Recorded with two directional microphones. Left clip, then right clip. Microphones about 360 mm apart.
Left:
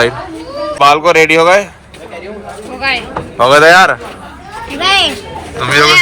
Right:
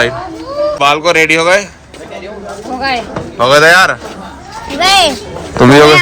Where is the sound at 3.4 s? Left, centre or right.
Centre.